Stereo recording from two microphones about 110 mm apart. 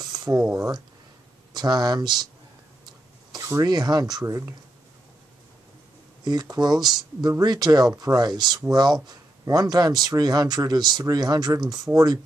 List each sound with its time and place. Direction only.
0.0 s speech: 35° right (ahead or behind)
2.8 s cough: 40° right (ahead or behind)
3.4 s speech: 35° right (ahead or behind)
6.2 s speech: 35° right (ahead or behind)